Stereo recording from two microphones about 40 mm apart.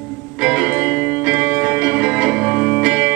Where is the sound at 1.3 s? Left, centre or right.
Centre.